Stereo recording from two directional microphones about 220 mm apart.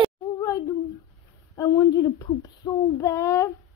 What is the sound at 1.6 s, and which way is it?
Speech, 15° left (ahead or behind).